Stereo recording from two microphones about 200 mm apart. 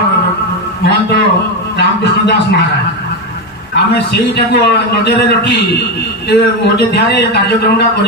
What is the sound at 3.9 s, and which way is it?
A man's voice, 55° left (ahead or behind).